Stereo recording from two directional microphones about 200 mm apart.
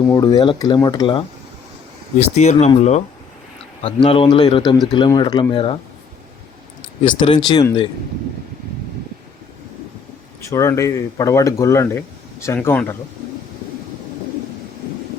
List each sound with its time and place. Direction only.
0.1 s speech: 20° left (ahead or behind)
2.1 s speech: 35° left (ahead or behind)
7.2 s speech: 25° left (ahead or behind)
10.5 s speech: 15° left (ahead or behind)